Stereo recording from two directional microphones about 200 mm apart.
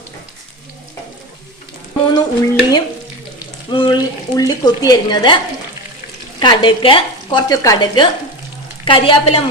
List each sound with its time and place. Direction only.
2.1 s speech: 20° left (ahead or behind)
6.4 s speech: 25° left (ahead or behind)